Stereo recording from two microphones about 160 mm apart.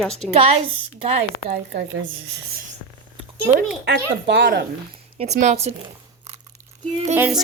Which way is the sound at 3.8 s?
90° right.